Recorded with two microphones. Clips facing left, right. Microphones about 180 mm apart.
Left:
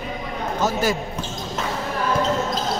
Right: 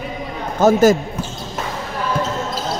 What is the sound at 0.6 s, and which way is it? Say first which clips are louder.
Speech: right 10 dB; 45° right (ahead or behind).